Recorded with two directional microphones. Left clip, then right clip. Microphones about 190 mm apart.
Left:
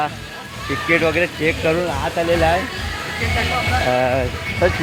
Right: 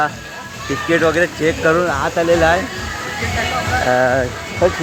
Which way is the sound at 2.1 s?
15° right (ahead or behind).